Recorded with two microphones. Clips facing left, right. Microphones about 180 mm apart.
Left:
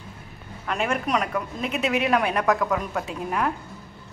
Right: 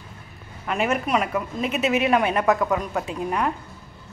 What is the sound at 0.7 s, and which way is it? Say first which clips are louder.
A woman's voice: right 2 dB; 5° right (ahead or behind).